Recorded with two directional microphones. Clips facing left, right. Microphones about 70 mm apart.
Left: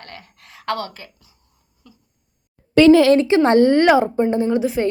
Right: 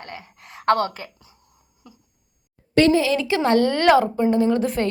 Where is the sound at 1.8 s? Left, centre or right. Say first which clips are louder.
Right 1 dB; right.